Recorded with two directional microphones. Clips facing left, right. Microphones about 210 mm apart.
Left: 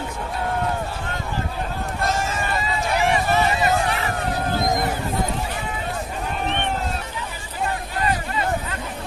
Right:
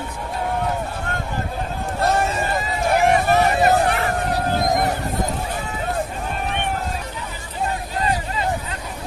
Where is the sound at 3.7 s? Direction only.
50° right (ahead or behind).